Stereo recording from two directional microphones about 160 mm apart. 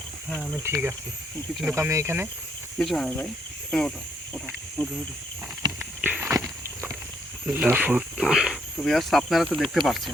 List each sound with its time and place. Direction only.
0.3 s speech: centre (ahead or behind)
0.6 s speech: 15° right (ahead or behind)
2.7 s speech: centre (ahead or behind)
5.8 s walk: 10° right (ahead or behind)
7.4 s speech: 10° right (ahead or behind)